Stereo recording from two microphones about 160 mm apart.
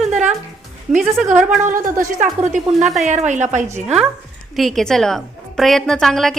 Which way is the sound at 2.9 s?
45° right (ahead or behind).